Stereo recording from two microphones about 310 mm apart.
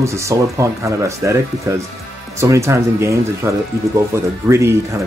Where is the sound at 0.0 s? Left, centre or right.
Centre.